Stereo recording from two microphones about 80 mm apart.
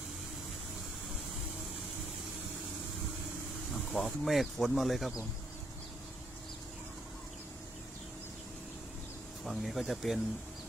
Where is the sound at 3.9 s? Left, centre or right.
Centre.